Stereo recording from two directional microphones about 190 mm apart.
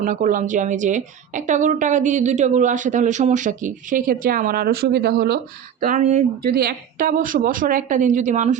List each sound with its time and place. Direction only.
0.0 s a woman's voice: 45° right (ahead or behind)
5.8 s a woman's voice: 40° right (ahead or behind)
6.4 s a woman's voice: 55° right (ahead or behind)